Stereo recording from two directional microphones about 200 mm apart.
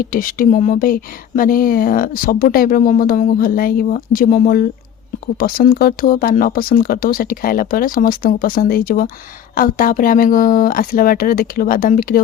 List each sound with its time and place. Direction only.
0.0 s speech: 45° left (ahead or behind)